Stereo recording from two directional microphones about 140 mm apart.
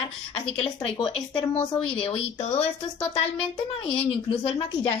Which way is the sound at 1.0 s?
35° left (ahead or behind).